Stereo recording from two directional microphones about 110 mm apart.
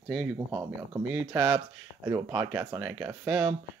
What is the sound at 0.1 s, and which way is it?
Speech, 5° right (ahead or behind).